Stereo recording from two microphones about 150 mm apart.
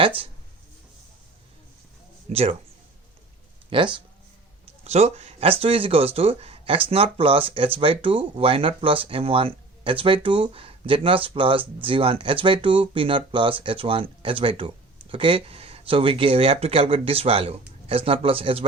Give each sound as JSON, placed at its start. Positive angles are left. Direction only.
{"t": 2.3, "sound": "speech", "side_deg": -40}
{"t": 3.7, "sound": "speech", "side_deg": -35}
{"t": 4.6, "sound": "speech", "side_deg": -45}